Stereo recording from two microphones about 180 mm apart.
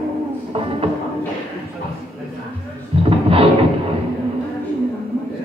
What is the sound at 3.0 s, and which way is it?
Music, 30° right (ahead or behind).